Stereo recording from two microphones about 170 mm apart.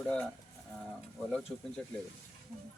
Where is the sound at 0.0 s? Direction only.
5° left (ahead or behind).